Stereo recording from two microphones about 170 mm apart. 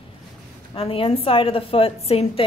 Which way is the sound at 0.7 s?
35° left (ahead or behind).